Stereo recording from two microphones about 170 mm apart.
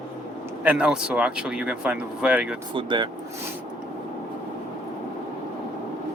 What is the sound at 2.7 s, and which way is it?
Speech, 30° right (ahead or behind).